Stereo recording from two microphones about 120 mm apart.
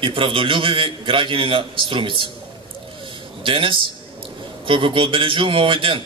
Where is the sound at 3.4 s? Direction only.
45° right (ahead or behind).